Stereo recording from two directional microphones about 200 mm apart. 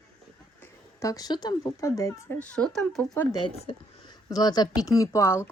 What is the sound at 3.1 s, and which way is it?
Speech, 15° left (ahead or behind).